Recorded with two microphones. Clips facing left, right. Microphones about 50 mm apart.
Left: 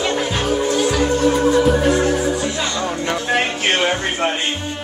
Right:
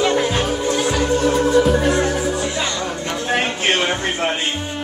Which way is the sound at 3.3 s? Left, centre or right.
Centre.